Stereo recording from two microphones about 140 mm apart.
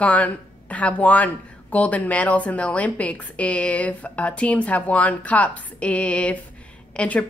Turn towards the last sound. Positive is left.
turn(degrees=10)  # may be behind; listen again after turning